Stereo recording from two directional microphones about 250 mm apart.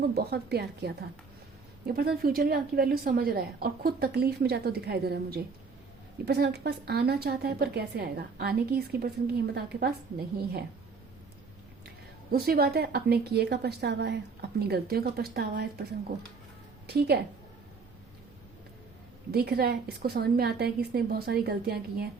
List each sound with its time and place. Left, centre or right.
0.0 s a woman's voice: right
12.3 s a woman's voice: right
19.3 s a woman's voice: right